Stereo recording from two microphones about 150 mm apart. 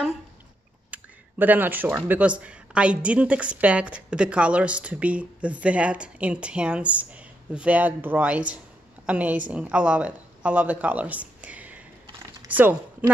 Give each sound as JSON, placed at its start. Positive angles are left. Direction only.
{"t": 0.9, "sound": "a woman's voice", "side_deg": -10}